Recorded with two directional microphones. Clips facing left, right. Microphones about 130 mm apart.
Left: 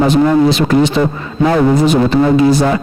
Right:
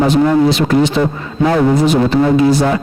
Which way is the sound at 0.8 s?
35° left (ahead or behind).